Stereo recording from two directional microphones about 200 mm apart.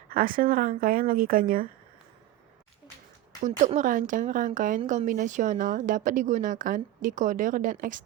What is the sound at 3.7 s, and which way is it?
A woman's voice, 40° right (ahead or behind).